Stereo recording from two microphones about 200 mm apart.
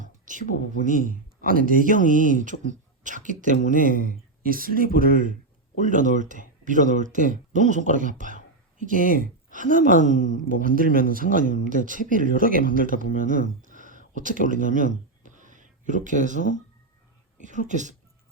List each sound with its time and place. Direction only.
0.0 s a sound: 40° right (ahead or behind)
0.9 s speech: 40° right (ahead or behind)
17.7 s speech: 40° right (ahead or behind)